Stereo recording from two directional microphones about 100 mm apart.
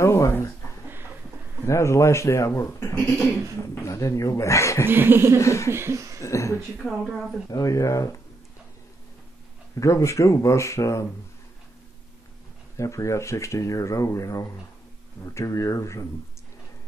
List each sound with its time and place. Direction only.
0.0 s a sound: 25° left (ahead or behind)
1.7 s speech: 30° left (ahead or behind)
4.8 s laughter: 20° right (ahead or behind)
5.4 s speech: 30° left (ahead or behind)
5.7 s laughter: 25° right (ahead or behind)
6.2 s speech: 30° left (ahead or behind)
6.8 s speech: centre (ahead or behind)
7.4 s speech: 35° left (ahead or behind)
9.8 s speech: 30° left (ahead or behind)
12.7 s speech: 30° left (ahead or behind)